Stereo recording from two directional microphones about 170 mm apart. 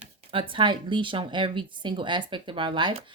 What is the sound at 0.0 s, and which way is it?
Speech, 35° right (ahead or behind).